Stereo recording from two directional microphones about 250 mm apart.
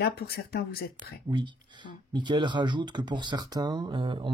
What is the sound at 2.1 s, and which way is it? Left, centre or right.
Speech, centre.